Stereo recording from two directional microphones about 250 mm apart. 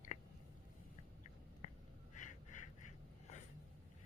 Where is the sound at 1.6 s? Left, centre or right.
Left.